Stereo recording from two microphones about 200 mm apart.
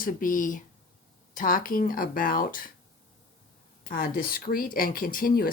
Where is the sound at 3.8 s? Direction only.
45° left (ahead or behind).